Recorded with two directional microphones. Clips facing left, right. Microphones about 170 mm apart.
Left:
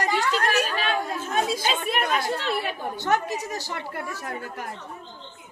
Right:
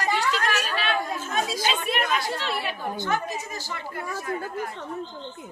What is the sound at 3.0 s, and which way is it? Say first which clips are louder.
A woman's voice: left 5 dB; 75° left (ahead or behind).